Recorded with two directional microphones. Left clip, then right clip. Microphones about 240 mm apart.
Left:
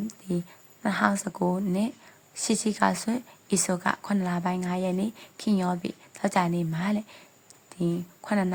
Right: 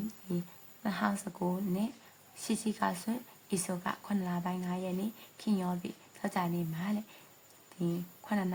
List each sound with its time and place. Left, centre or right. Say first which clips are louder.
0.8 s a woman's voice: left 9 dB; left